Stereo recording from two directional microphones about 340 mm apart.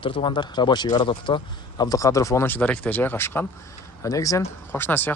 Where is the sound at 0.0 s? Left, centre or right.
Centre.